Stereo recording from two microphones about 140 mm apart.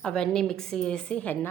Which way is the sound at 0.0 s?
5° left (ahead or behind).